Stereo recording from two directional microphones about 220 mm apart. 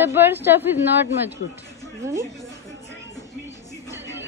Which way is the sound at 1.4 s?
45° left (ahead or behind).